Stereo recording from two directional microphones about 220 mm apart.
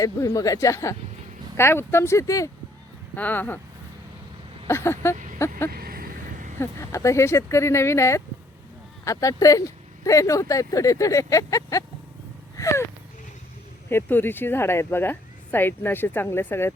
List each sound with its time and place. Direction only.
0.0 s speech: 15° left (ahead or behind)
4.7 s speech: 10° left (ahead or behind)
5.1 s vehicle: 35° right (ahead or behind)
6.6 s speech: 10° left (ahead or behind)
13.9 s speech: 10° left (ahead or behind)